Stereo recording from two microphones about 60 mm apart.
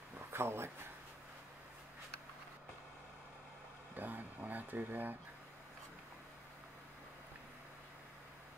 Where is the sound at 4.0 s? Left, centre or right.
Right.